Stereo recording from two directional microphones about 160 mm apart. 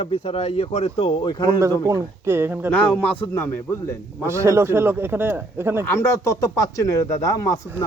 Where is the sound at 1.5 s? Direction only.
20° right (ahead or behind).